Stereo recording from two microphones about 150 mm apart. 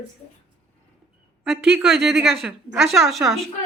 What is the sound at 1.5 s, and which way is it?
A woman's voice, centre (ahead or behind).